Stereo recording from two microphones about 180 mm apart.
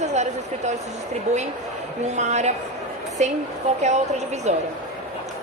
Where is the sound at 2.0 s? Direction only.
40° right (ahead or behind).